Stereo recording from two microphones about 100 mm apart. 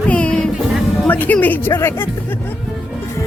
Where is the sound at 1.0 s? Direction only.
15° left (ahead or behind).